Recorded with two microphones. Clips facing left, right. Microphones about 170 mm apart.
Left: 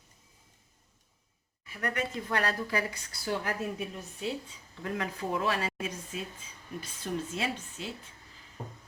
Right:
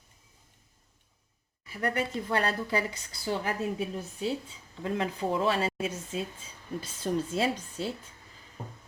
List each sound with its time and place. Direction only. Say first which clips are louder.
1.6 s a woman's voice: right 3 dB; 30° right (ahead or behind)